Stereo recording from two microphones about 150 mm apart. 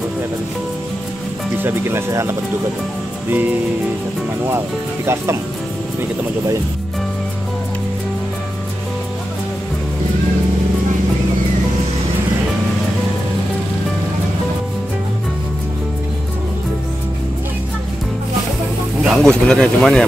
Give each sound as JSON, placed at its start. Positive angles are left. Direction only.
{"t": 1.6, "sound": "speech", "side_deg": -15}
{"t": 19.0, "sound": "speech", "side_deg": 5}